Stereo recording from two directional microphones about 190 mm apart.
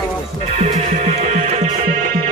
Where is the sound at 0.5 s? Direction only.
35° right (ahead or behind).